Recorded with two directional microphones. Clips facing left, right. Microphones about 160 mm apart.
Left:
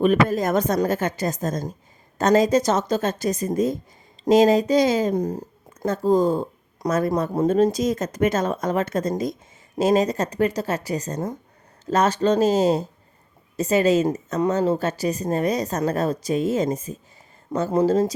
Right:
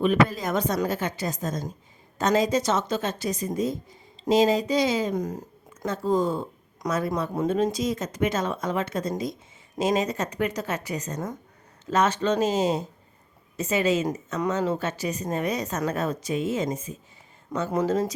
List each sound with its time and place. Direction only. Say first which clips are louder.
0.0 s speech: left 3 dB; 45° left (ahead or behind)
5.1 s a woman's voice: left 5 dB; 30° left (ahead or behind)